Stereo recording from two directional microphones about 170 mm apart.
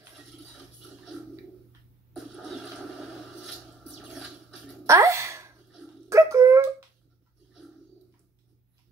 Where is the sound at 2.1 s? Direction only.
Centre (ahead or behind).